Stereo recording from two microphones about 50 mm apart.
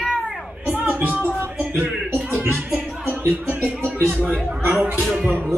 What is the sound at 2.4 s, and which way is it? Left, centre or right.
Music, right.